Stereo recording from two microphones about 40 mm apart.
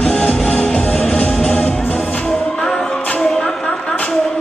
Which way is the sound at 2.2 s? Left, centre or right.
Centre.